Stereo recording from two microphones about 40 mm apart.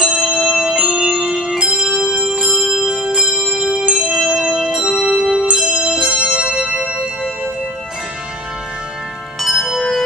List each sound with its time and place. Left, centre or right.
0.2 s music: centre; by 1.1 s right
1.3 s bell: centre; by 3.3 s right
3.5 s music: centre
6.3 s music: right
9.4 s music: centre
9.8 s music: centre